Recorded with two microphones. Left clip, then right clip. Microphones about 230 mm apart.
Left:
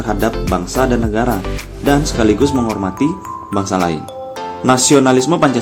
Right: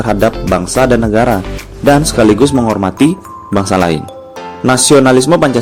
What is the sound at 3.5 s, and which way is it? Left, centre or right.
Speech, right.